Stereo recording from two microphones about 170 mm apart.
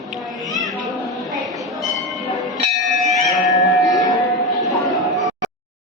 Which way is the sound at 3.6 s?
Centre (ahead or behind).